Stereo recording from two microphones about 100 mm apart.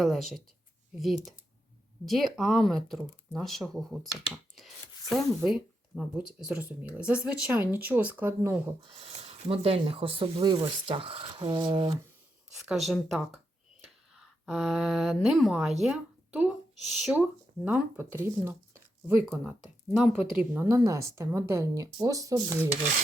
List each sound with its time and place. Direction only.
0.0 s speech: centre (ahead or behind); by 8.7 s 25° right (ahead or behind)
8.9 s speech: 90° right; by 11.9 s 50° right (ahead or behind)
12.6 s a woman's voice: centre (ahead or behind)
17.7 s speech: 25° right (ahead or behind)
20.3 s speech: 15° right (ahead or behind)
20.7 s speech: 30° right (ahead or behind)